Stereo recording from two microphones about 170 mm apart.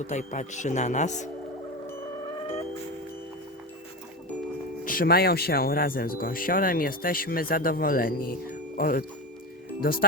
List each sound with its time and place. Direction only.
0.0 s speech: 45° left (ahead or behind)
4.9 s speech: 60° left (ahead or behind)